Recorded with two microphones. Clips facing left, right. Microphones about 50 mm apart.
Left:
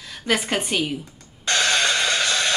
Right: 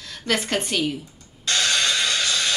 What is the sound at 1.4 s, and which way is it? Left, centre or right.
Music, left.